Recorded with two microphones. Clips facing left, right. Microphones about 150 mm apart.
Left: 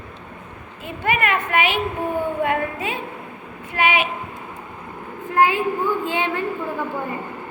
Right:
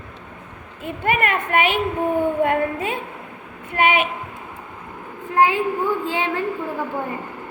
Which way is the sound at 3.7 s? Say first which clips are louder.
Right 2 dB; 50° right (ahead or behind).